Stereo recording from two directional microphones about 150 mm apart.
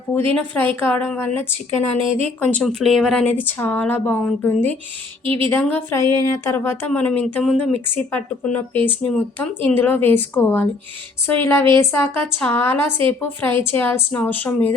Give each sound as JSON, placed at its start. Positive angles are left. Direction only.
{"t": 0.3, "sound": "speech", "side_deg": 10}
{"t": 2.0, "sound": "speech", "side_deg": -40}
{"t": 2.4, "sound": "speech", "side_deg": 10}
{"t": 5.2, "sound": "speech", "side_deg": -35}
{"t": 5.5, "sound": "speech", "side_deg": 10}